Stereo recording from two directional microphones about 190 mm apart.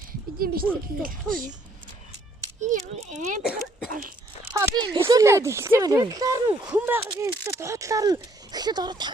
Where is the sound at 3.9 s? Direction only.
45° right (ahead or behind).